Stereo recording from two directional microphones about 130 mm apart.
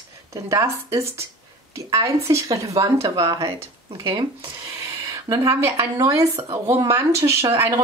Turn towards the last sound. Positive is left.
turn(degrees=-20)  # may be behind; listen again after turning